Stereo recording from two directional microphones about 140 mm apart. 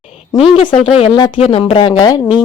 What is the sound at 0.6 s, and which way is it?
Speech, 45° left (ahead or behind).